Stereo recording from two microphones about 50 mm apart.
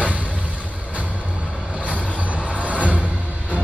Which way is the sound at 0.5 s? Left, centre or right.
Right.